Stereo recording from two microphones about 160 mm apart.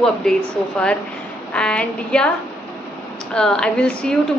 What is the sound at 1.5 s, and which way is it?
Speech, 5° left (ahead or behind).